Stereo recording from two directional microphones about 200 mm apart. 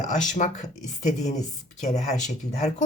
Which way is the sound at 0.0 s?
35° left (ahead or behind).